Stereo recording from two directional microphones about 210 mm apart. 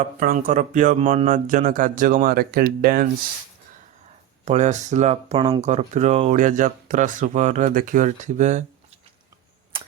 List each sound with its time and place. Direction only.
0.0 s speech: 40° right (ahead or behind)
4.4 s speech: 35° right (ahead or behind)